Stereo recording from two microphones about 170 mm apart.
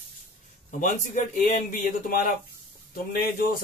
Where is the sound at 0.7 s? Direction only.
50° left (ahead or behind).